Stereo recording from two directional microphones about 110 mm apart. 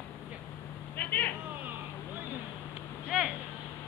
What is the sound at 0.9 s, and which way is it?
Vehicle, 15° left (ahead or behind).